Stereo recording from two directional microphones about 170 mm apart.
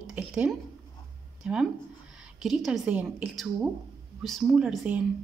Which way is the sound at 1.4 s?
5° right (ahead or behind).